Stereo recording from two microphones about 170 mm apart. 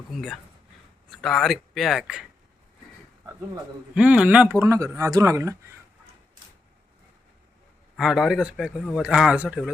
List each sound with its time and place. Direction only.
0.1 s speech: centre (ahead or behind)
3.9 s speech: 5° right (ahead or behind)
4.6 s speech: 20° right (ahead or behind)
7.9 s speech: centre (ahead or behind)